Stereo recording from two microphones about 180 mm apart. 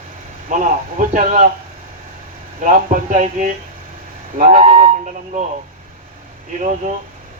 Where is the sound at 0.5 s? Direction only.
45° right (ahead or behind).